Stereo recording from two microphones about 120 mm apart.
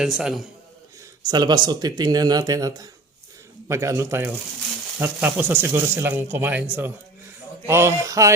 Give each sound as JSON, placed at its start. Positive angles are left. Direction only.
{"t": 0.0, "sound": "a man's voice", "side_deg": -5}
{"t": 1.2, "sound": "a man's voice", "side_deg": -35}